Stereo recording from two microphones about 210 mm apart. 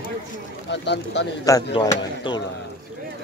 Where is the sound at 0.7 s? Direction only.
55° left (ahead or behind).